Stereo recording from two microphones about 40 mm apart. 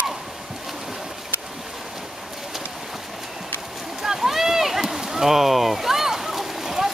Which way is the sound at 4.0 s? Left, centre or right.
Centre.